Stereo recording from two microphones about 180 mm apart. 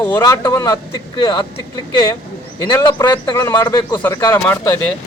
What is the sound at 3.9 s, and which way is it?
Speech, 10° left (ahead or behind).